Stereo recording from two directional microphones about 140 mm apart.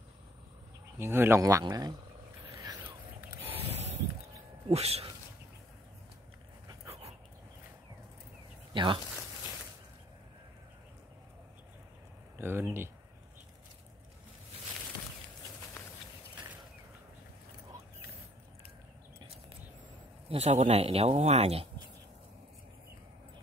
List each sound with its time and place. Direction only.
0.9 s speech: 15° right (ahead or behind)
3.5 s vehicle: 50° right (ahead or behind)
4.6 s speech: 50° right (ahead or behind)
8.7 s speech: 35° right (ahead or behind)
12.4 s speech: 15° right (ahead or behind)
20.2 s speech: 50° right (ahead or behind)